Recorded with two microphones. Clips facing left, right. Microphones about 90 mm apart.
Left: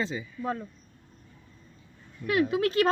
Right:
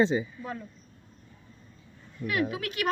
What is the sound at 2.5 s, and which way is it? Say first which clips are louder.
Speech: left 9 dB; 35° left (ahead or behind).